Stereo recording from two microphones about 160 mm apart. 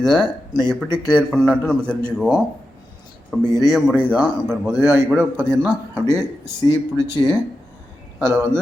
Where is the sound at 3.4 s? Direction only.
25° left (ahead or behind).